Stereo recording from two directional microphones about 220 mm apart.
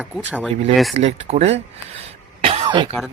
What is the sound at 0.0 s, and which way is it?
Speech, 5° right (ahead or behind).